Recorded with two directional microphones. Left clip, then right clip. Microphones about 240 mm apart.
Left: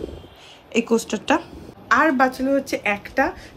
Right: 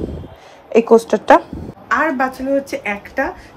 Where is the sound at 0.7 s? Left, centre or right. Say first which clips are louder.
Right 10 dB; centre.